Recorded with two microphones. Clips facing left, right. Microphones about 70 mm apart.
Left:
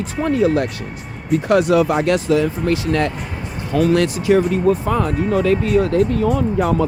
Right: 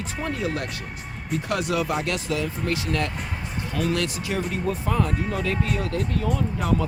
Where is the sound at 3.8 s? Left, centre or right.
Left.